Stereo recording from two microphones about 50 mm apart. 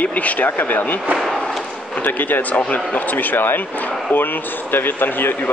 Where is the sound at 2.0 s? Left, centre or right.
Left.